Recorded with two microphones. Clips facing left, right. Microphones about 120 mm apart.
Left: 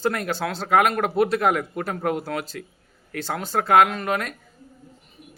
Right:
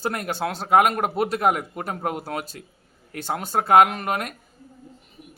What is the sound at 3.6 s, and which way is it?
Speech, 35° right (ahead or behind).